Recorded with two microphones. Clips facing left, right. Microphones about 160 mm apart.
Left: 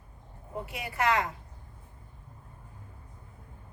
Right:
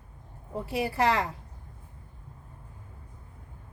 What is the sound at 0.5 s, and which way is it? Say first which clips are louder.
Speech: right 7 dB; 35° right (ahead or behind).